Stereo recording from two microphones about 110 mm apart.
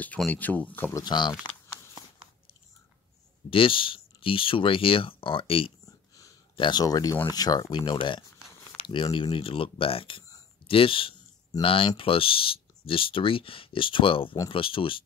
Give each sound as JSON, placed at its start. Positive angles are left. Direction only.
{"t": 0.3, "sound": "speech", "side_deg": 15}
{"t": 0.9, "sound": "speech", "side_deg": 40}
{"t": 3.4, "sound": "speech", "side_deg": 55}
{"t": 5.9, "sound": "a sound", "side_deg": 30}
{"t": 6.5, "sound": "speech", "side_deg": 45}